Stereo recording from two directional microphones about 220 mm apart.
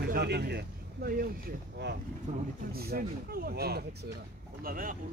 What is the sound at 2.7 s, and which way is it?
Speech, 45° right (ahead or behind).